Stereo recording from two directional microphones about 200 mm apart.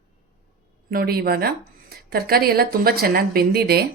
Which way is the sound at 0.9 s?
50° right (ahead or behind).